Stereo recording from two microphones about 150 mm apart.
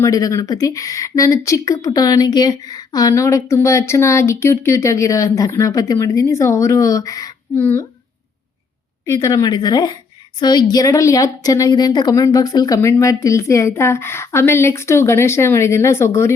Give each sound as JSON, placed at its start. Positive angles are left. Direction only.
{"t": 0.0, "sound": "speech", "side_deg": 20}
{"t": 9.0, "sound": "speech", "side_deg": 20}